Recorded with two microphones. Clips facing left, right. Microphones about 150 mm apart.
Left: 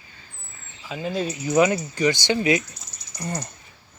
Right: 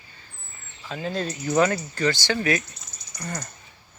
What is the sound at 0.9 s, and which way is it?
Speech, 10° left (ahead or behind).